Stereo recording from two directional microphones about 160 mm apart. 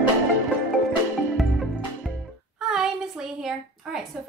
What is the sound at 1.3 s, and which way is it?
Music, centre (ahead or behind).